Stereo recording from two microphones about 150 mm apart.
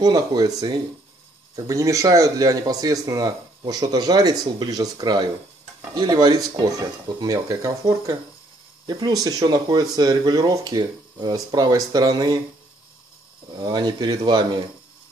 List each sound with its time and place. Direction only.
0.0 s speech: 25° right (ahead or behind)
13.5 s speech: 30° right (ahead or behind)